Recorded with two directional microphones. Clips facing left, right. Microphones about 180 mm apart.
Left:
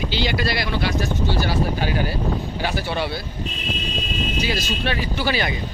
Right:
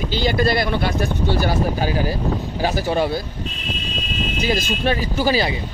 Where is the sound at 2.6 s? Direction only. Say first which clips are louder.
Right 8 dB; 40° right (ahead or behind).